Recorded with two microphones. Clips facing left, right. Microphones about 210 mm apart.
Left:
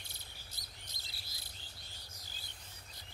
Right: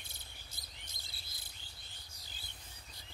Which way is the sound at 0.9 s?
55° right (ahead or behind).